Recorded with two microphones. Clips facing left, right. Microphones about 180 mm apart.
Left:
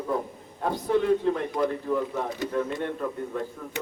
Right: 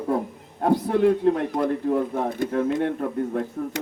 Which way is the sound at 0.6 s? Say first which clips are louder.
Right 4 dB; 60° right (ahead or behind).